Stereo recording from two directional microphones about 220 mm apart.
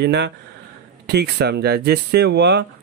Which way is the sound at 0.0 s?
50° right (ahead or behind).